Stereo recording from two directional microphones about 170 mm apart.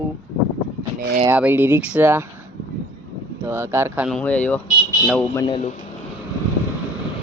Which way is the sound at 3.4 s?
15° right (ahead or behind).